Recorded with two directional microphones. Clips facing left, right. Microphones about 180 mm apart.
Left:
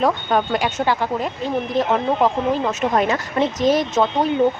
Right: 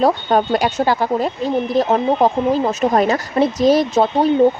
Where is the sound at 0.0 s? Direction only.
35° right (ahead or behind).